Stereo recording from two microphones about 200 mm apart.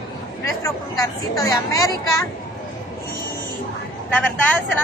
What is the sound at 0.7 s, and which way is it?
Speech, 15° left (ahead or behind).